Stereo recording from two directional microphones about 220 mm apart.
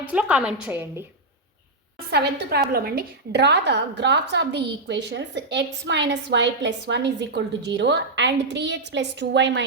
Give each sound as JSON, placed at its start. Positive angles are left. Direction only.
{"t": 0.0, "sound": "a woman's voice", "side_deg": -5}
{"t": 2.0, "sound": "a woman's voice", "side_deg": -50}